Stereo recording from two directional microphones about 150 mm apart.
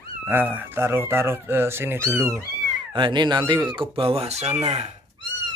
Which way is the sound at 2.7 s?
30° right (ahead or behind).